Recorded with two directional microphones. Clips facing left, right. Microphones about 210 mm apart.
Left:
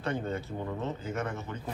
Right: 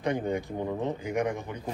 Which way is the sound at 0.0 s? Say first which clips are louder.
Right 4 dB; 15° right (ahead or behind).